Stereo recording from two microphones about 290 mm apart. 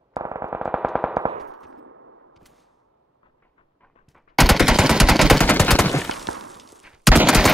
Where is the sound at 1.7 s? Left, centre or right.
Right.